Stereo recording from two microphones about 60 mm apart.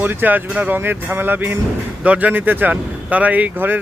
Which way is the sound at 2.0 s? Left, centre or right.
Right.